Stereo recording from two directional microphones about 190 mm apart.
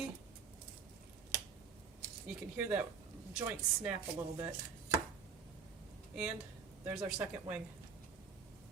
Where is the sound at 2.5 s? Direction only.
10° right (ahead or behind).